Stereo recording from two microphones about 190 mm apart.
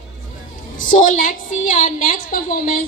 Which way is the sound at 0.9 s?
45° left (ahead or behind).